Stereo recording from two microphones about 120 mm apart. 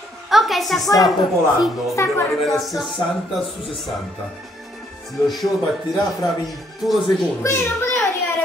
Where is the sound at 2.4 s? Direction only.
Centre (ahead or behind).